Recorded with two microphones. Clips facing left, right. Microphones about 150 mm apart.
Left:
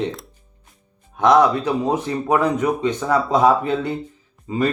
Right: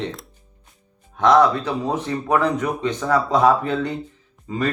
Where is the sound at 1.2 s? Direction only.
15° left (ahead or behind).